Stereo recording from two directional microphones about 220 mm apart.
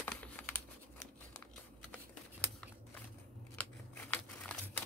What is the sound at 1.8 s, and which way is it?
Typing, 5° left (ahead or behind).